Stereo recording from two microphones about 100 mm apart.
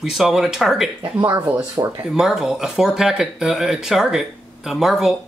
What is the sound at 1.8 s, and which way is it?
Speech, 40° right (ahead or behind).